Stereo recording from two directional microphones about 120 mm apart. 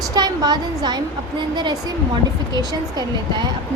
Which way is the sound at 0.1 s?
35° right (ahead or behind).